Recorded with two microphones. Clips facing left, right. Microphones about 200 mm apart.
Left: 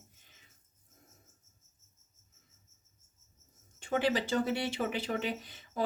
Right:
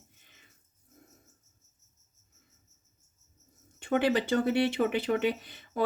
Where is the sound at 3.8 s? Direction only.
60° right (ahead or behind).